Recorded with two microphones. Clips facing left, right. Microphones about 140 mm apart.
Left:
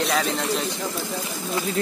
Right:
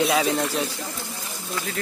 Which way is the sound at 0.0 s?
5° right (ahead or behind).